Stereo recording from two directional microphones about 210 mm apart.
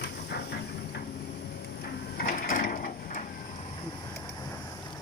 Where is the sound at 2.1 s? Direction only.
40° left (ahead or behind).